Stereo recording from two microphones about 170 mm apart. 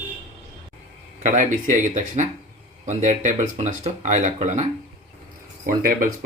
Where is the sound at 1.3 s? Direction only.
45° right (ahead or behind).